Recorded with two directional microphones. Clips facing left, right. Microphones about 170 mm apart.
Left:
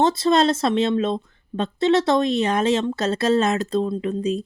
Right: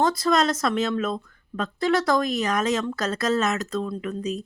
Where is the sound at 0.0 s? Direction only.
25° left (ahead or behind).